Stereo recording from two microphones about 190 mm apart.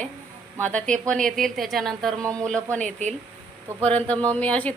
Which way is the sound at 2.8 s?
40° right (ahead or behind).